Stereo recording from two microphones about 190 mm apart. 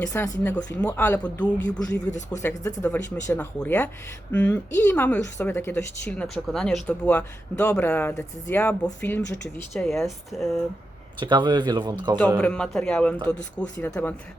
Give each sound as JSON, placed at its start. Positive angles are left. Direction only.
{"t": 0.0, "sound": "speech", "side_deg": 10}
{"t": 2.0, "sound": "speech", "side_deg": 40}
{"t": 2.6, "sound": "speech", "side_deg": 15}
{"t": 11.2, "sound": "speech", "side_deg": -25}
{"t": 12.4, "sound": "speech", "side_deg": 5}